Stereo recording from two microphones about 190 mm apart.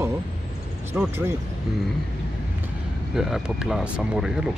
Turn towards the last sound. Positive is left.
turn(degrees=-5)  # may be behind; listen again after turning